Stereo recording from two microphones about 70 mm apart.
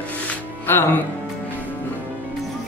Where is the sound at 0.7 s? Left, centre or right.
Left.